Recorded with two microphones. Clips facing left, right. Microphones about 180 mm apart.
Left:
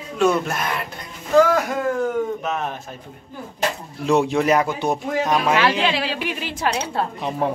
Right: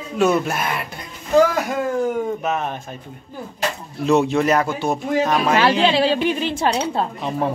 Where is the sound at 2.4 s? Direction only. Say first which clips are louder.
Right 2 dB; 5° right (ahead or behind).